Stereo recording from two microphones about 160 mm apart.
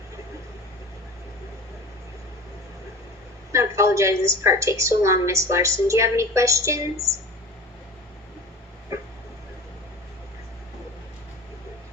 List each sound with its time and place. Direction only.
3.5 s a woman's voice: 20° right (ahead or behind)